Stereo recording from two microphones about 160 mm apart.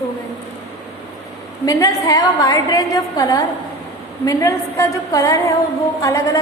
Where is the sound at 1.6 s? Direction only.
20° left (ahead or behind).